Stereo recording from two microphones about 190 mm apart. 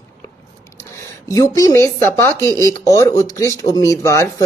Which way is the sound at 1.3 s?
15° left (ahead or behind).